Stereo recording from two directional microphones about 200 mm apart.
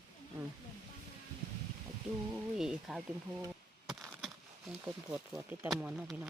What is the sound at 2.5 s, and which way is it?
Speech, 5° right (ahead or behind).